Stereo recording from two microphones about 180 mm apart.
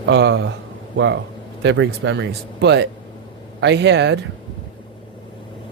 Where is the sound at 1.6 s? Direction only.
80° right.